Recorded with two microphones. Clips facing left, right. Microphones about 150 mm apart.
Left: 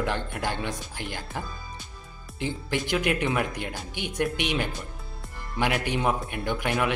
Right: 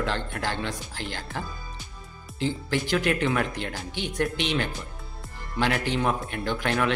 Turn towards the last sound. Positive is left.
turn(degrees=15)  # may be behind; listen again after turning